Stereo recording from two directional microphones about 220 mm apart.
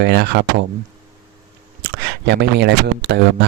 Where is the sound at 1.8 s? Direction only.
50° right (ahead or behind).